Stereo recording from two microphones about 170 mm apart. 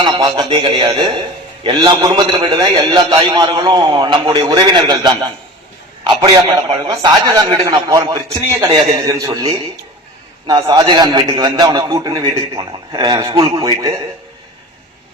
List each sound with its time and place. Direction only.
0.0 s a man's voice: 25° right (ahead or behind)